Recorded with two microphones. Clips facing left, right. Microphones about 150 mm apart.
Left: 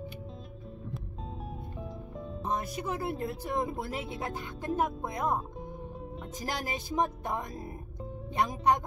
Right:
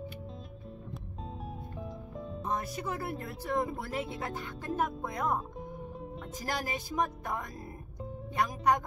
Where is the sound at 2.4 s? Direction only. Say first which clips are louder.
Left 2 dB; 20° left (ahead or behind).